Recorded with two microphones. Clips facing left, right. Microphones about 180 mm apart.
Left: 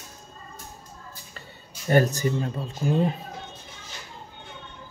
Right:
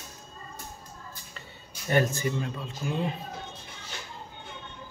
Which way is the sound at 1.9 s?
40° left (ahead or behind).